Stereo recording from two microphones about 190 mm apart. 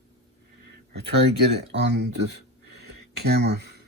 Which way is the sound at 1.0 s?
60° right (ahead or behind).